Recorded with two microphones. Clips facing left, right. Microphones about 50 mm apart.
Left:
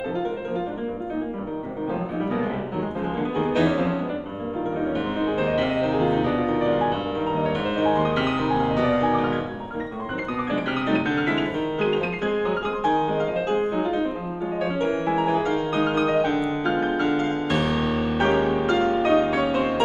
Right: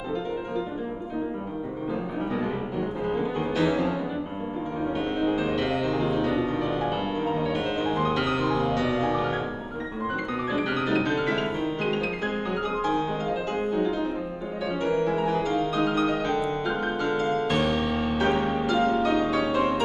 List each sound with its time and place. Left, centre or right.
2.3 s music: centre
5.4 s music: centre
10.5 s music: left
13.5 s music: left
15.2 s music: centre
17.4 s music: centre
18.1 s music: centre
18.4 s music: centre
18.7 s music: left